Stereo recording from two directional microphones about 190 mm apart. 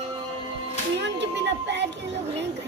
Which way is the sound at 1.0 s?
65° right (ahead or behind).